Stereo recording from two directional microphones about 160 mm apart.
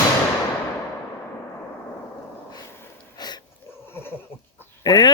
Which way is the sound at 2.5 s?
20° left (ahead or behind).